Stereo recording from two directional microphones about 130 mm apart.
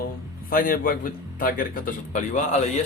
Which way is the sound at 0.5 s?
90° left.